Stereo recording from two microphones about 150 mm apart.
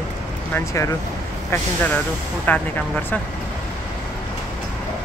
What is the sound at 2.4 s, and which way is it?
Speech, 10° left (ahead or behind).